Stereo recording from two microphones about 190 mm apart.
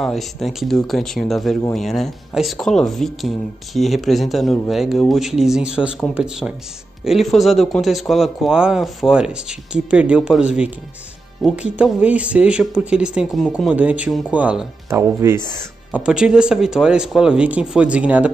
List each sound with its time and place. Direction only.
0.0 s speech: centre (ahead or behind)